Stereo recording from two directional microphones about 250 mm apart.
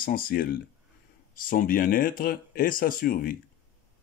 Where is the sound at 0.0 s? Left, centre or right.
Left.